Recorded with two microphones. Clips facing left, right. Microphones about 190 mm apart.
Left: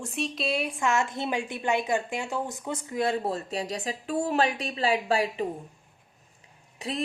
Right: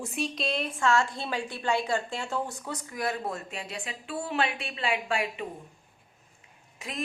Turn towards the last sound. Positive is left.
turn(degrees=35)  # may be behind; listen again after turning